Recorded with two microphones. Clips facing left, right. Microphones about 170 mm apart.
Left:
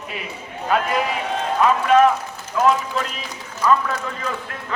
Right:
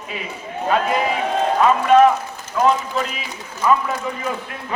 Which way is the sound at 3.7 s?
20° right (ahead or behind).